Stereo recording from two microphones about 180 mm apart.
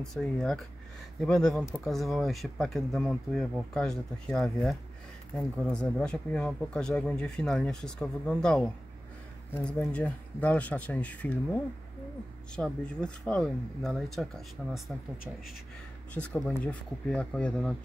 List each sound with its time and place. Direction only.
0.0 s speech: centre (ahead or behind)
16.1 s speech: 5° left (ahead or behind)